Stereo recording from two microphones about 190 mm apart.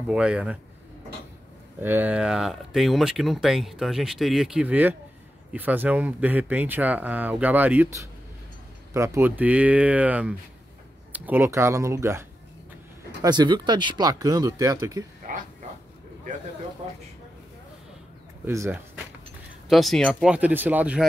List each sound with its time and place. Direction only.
0.1 s speech: 5° right (ahead or behind)
1.8 s speech: 10° right (ahead or behind)
15.3 s speech: 45° right (ahead or behind)
18.4 s speech: 15° right (ahead or behind)
19.7 s speech: centre (ahead or behind)